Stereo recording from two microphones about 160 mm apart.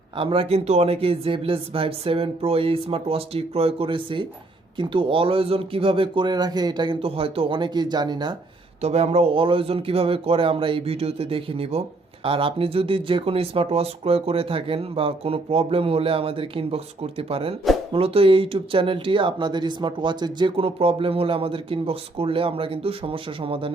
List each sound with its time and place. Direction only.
0.2 s speech: 35° right (ahead or behind)
8.8 s speech: 40° right (ahead or behind)